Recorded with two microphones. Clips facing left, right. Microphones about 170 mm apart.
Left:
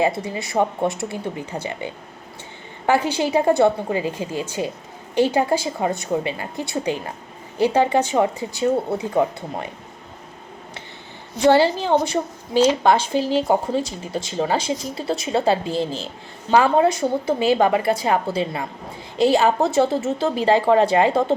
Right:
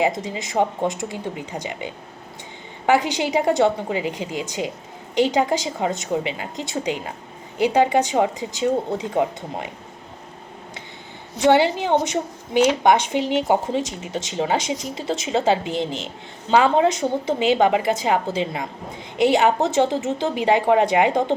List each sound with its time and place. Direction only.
0.0 s speech: 20° right (ahead or behind)
11.3 s a woman's voice: 20° right (ahead or behind)